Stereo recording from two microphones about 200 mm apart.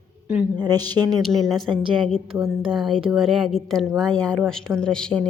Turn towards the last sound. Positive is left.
turn(degrees=5)  # may be behind; listen again after turning